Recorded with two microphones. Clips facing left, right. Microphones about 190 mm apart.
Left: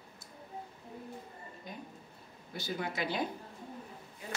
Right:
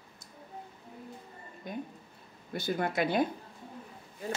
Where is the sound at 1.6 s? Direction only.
55° right (ahead or behind).